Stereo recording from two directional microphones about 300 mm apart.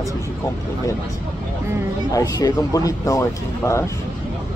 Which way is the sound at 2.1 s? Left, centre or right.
Centre.